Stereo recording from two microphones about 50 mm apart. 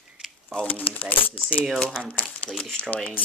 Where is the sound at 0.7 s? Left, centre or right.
Left.